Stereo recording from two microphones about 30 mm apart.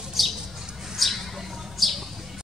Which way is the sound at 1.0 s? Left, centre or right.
Centre.